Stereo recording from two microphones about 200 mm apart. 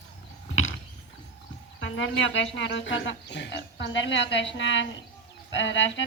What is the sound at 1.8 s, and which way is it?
Speech, 70° left (ahead or behind).